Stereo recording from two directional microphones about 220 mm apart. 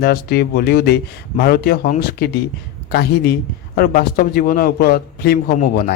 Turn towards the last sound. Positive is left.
turn(degrees=45)  # may be behind; listen again after turning